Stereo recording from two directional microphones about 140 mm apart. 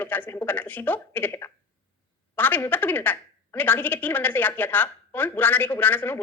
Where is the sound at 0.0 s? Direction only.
15° left (ahead or behind).